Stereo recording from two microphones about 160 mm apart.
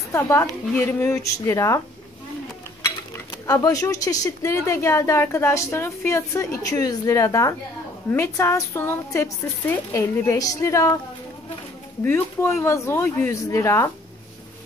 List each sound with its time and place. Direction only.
0.1 s a woman's voice: 15° left (ahead or behind)
3.4 s speech: 20° left (ahead or behind)
12.0 s a woman's voice: 15° left (ahead or behind)